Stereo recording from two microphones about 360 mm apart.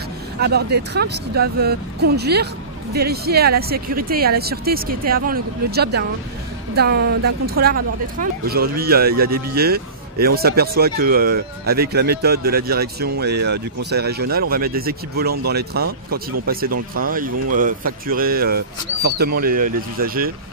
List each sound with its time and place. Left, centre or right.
0.4 s speech: right